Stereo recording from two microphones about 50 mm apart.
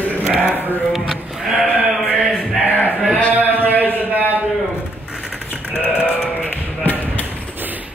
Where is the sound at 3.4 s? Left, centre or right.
Right.